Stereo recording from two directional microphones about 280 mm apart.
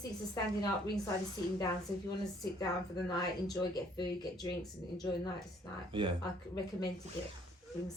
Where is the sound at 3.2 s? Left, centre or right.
Centre.